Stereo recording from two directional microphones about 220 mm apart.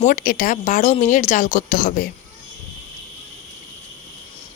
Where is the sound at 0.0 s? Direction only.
40° left (ahead or behind).